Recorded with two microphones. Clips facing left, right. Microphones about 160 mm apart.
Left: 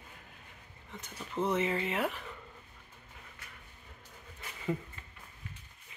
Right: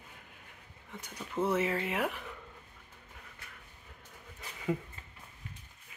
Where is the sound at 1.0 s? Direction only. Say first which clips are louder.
Right 1 dB; 10° right (ahead or behind).